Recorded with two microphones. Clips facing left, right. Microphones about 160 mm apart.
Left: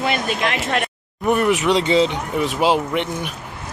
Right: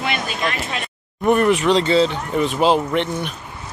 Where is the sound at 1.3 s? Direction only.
5° left (ahead or behind).